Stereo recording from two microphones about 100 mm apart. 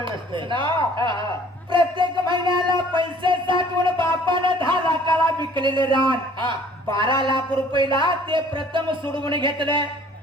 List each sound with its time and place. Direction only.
0.0 s speech: 55° right (ahead or behind)
1.7 s music: 55° right (ahead or behind)
2.9 s a sound: 55° right (ahead or behind)
7.3 s speech: 55° right (ahead or behind)